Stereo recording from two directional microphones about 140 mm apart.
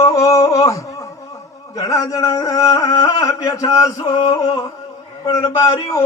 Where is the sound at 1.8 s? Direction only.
20° left (ahead or behind).